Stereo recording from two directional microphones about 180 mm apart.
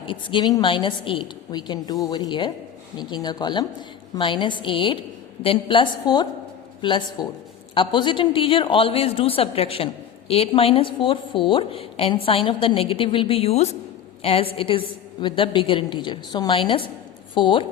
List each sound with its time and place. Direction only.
0.1 s a man's voice: 25° left (ahead or behind)